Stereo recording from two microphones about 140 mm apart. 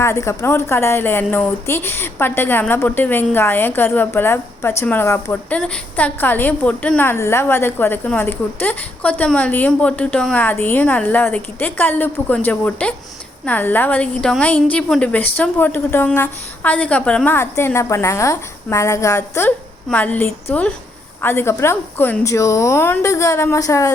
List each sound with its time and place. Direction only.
0.0 s a woman's voice: 20° left (ahead or behind)